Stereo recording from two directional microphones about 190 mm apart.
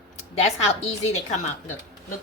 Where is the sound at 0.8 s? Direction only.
35° left (ahead or behind).